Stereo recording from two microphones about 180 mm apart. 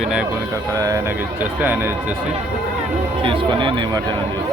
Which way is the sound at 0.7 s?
20° right (ahead or behind).